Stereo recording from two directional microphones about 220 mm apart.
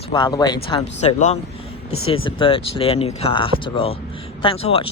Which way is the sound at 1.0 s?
30° left (ahead or behind).